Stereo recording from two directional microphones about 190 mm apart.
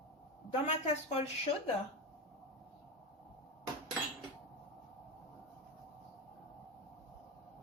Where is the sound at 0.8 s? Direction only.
35° left (ahead or behind).